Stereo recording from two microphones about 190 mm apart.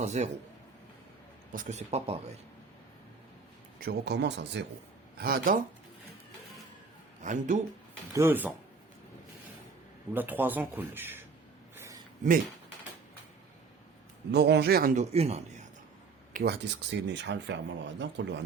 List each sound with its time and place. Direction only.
0.0 s speech: 35° right (ahead or behind)
1.5 s speech: 40° right (ahead or behind)
3.8 s speech: 55° right (ahead or behind)
5.1 s speech: 50° right (ahead or behind)
7.2 s speech: 40° right (ahead or behind)
8.1 s speech: 10° right (ahead or behind)
10.2 s speech: 10° right (ahead or behind)
11.8 s a sound: 15° right (ahead or behind)
14.3 s speech: 60° right (ahead or behind)
15.1 s speech: 35° right (ahead or behind)
16.3 s speech: 55° right (ahead or behind)